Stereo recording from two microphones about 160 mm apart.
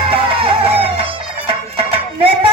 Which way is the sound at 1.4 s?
35° right (ahead or behind).